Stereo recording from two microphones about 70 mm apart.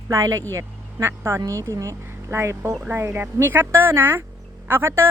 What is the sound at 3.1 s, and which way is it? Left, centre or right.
Speech, right.